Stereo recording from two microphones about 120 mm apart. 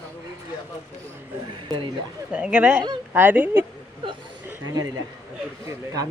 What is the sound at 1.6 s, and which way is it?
Speech, 40° right (ahead or behind).